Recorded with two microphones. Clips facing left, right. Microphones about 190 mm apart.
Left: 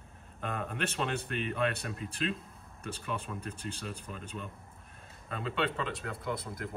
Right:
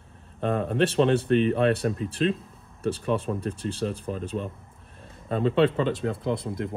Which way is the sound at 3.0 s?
35° right (ahead or behind).